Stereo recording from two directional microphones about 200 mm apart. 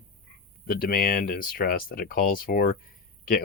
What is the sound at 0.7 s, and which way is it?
Speech, 45° left (ahead or behind).